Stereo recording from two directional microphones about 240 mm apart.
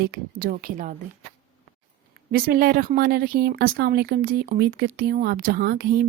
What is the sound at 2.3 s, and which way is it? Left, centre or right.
Speech, right.